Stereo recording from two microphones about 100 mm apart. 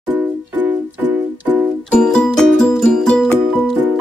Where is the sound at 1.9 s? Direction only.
10° left (ahead or behind).